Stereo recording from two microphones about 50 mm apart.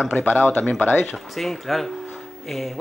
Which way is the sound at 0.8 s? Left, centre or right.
Left.